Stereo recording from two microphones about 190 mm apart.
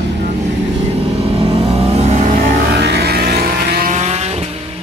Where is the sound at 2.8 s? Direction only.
60° right (ahead or behind); by 4.5 s 35° right (ahead or behind).